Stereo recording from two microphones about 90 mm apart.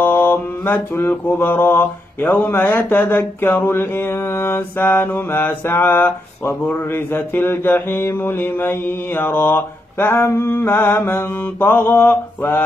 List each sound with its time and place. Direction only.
0.0 s mantra: 25° left (ahead or behind)